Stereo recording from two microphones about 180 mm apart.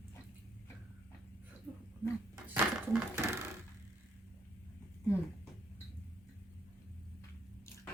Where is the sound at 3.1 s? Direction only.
15° right (ahead or behind).